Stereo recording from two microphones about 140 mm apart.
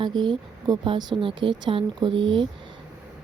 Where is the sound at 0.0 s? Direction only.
35° right (ahead or behind).